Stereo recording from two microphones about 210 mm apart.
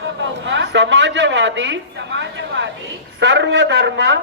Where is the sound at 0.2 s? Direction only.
60° right (ahead or behind).